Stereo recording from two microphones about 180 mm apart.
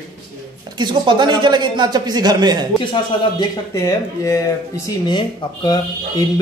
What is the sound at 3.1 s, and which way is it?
Speech, 30° left (ahead or behind).